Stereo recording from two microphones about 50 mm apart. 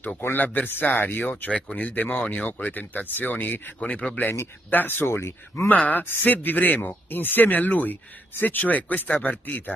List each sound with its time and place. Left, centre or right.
0.4 s speech: left
1.5 s speech: left
1.9 s speech: left
2.1 s speech: left
4.6 s speech: left
5.1 s speech: left
5.7 s speech: left